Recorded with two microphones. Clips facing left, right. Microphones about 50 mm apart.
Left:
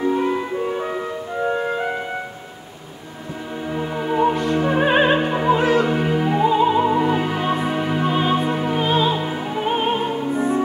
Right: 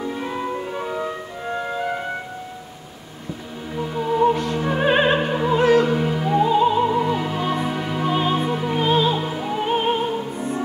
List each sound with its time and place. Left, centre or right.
0.0 s music: left
3.7 s music: left
4.3 s music: centre
5.9 s opera: left
8.1 s music: centre
9.9 s music: left